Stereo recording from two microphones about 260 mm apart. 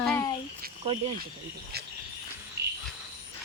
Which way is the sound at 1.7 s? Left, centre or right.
Right.